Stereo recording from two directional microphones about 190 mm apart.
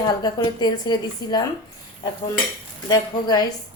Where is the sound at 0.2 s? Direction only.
20° left (ahead or behind).